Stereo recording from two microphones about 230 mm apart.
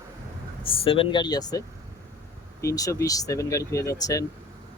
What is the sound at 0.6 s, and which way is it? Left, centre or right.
Speech, left.